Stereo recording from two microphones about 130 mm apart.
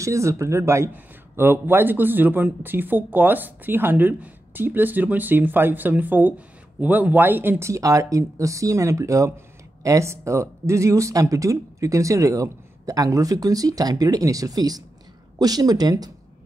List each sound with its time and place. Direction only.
0.0 s speech: 25° right (ahead or behind)